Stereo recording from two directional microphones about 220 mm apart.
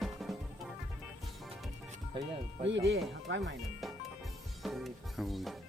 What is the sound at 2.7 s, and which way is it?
Speech, 55° right (ahead or behind).